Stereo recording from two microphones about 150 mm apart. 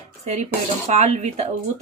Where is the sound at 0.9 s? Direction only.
50° right (ahead or behind).